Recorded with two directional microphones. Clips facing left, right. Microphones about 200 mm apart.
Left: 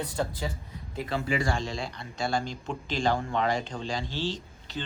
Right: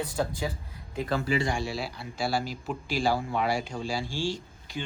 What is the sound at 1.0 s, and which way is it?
Speech, 40° right (ahead or behind).